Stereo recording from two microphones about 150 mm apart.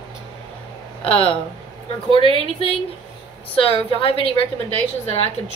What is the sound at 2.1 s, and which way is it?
Speech, 35° right (ahead or behind).